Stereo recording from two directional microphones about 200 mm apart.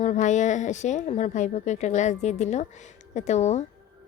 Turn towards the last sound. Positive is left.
turn(degrees=35)  # may be behind; listen again after turning